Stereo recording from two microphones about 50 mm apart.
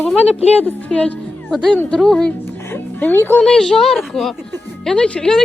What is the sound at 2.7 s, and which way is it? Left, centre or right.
Music, left.